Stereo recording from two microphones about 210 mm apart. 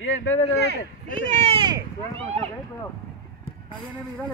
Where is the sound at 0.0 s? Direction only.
70° left (ahead or behind).